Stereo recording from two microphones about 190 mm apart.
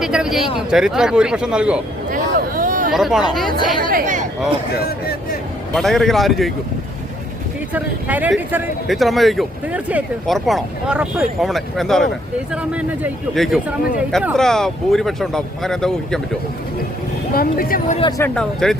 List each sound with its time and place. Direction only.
0.0 s speech: 5° right (ahead or behind)
2.0 s a sound: 45° right (ahead or behind)
2.9 s speech: centre (ahead or behind)
3.8 s speech: 45° right (ahead or behind)
4.8 s speech: 55° left (ahead or behind)
5.7 s speech: centre (ahead or behind)
7.7 s speech: 10° right (ahead or behind)
17.3 s speech: 50° left (ahead or behind)
18.2 s speech: 5° left (ahead or behind)